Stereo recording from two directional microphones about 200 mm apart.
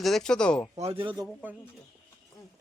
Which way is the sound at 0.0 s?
Centre (ahead or behind).